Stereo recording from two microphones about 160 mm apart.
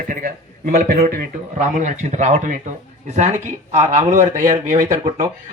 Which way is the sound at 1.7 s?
50° right (ahead or behind).